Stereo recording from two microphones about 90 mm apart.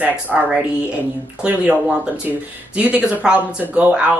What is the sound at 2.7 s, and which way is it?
Speech, 15° right (ahead or behind).